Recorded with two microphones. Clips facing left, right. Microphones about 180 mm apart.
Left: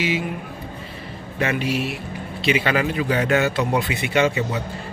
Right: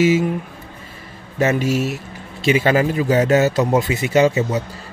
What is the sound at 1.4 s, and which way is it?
A man's voice, 45° right (ahead or behind).